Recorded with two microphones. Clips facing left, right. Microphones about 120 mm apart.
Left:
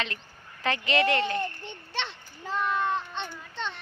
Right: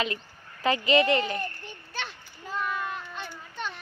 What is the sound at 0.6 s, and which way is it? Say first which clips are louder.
Speech: right 3 dB; 5° right (ahead or behind).